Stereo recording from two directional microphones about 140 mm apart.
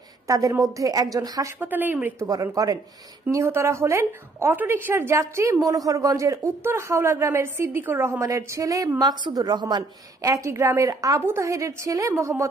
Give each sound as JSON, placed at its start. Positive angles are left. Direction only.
{"t": 0.3, "sound": "a woman's voice", "side_deg": -25}
{"t": 1.6, "sound": "speech", "side_deg": -15}
{"t": 2.4, "sound": "a woman's voice", "side_deg": -25}